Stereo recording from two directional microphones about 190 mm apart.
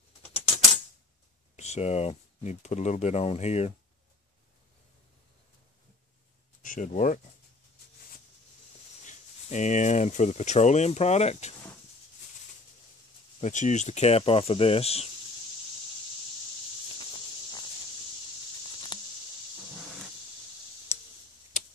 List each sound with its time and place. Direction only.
1.6 s speech: 35° left (ahead or behind)
6.6 s speech: 45° left (ahead or behind)
9.0 s speech: 40° left (ahead or behind)
13.4 s speech: 40° left (ahead or behind)
21.5 s tick-tock: 40° left (ahead or behind)